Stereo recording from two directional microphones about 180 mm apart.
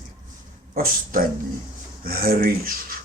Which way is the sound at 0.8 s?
50° right (ahead or behind).